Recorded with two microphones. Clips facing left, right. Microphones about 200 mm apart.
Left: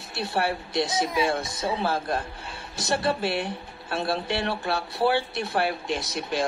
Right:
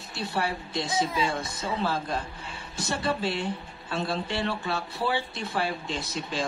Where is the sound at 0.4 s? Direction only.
65° left (ahead or behind).